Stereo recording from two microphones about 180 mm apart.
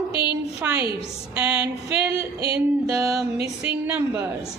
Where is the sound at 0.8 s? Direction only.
30° left (ahead or behind).